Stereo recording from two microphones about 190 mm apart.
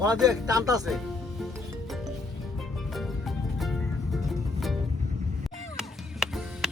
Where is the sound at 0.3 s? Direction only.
20° right (ahead or behind).